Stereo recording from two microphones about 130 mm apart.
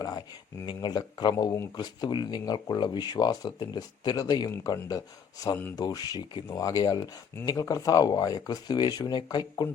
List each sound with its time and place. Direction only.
0.6 s speech: 35° left (ahead or behind)